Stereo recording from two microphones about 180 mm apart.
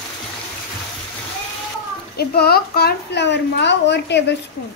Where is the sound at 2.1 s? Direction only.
60° left (ahead or behind).